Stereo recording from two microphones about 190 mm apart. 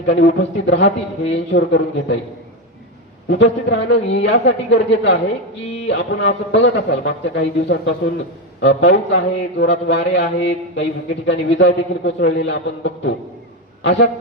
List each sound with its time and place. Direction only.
0.1 s a man's voice: 70° left (ahead or behind)
3.2 s a man's voice: 70° left (ahead or behind)